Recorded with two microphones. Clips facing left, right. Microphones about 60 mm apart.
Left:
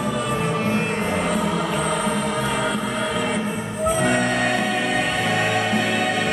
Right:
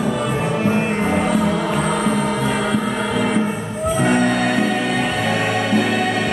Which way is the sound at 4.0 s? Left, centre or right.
Centre.